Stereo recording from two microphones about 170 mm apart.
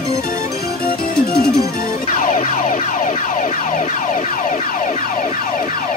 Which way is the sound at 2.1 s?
55° left (ahead or behind).